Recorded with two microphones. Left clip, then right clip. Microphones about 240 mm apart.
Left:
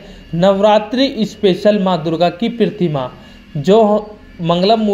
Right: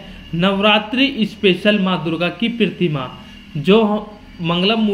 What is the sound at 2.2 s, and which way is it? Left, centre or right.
Speech, centre.